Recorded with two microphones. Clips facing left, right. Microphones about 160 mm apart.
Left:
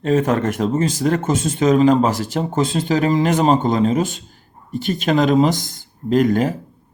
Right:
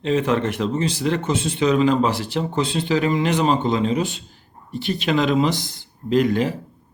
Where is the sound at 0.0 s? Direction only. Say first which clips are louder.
Left 3 dB; 45° left (ahead or behind).